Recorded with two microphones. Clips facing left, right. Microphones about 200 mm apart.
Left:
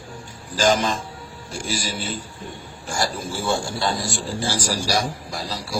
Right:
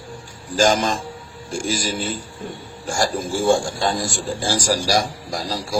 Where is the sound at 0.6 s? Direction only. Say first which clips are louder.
Right 2 dB; 45° right (ahead or behind).